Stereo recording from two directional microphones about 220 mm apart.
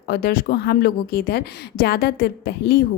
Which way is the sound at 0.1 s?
45° left (ahead or behind).